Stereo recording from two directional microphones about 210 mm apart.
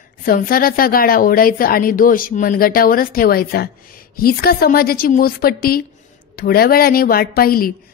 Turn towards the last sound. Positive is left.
turn(degrees=45)  # may be behind; listen again after turning